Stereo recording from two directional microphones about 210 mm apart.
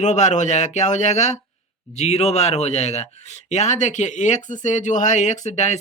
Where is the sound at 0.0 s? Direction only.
35° left (ahead or behind).